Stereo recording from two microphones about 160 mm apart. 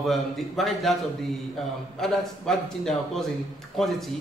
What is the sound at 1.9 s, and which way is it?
A man's voice, centre (ahead or behind).